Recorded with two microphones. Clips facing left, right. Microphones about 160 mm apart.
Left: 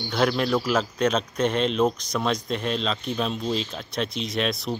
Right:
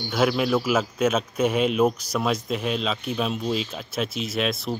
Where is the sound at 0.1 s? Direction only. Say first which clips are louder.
Right 1 dB; 5° right (ahead or behind).